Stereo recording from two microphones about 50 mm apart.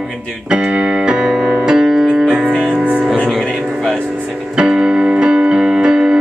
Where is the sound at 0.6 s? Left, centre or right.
Centre.